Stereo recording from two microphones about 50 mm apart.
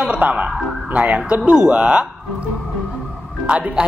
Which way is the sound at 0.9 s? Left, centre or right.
Right.